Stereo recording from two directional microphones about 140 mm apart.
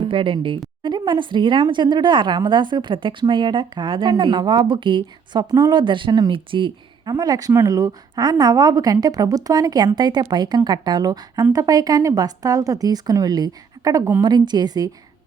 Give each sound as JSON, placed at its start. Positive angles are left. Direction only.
{"t": 0.0, "sound": "a woman's voice", "side_deg": -40}